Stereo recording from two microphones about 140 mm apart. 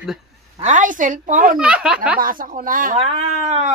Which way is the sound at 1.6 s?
5° right (ahead or behind).